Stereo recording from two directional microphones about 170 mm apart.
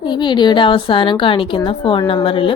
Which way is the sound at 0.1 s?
25° left (ahead or behind).